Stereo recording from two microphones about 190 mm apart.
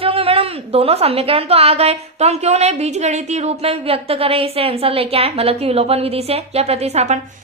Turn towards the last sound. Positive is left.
turn(degrees=-35)  # may be behind; listen again after turning